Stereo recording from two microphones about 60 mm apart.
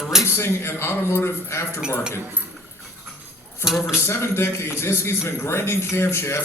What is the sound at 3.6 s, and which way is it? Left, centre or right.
Speech, centre.